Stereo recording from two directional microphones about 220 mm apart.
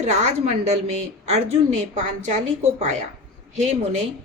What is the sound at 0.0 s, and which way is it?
A woman's voice, 30° right (ahead or behind).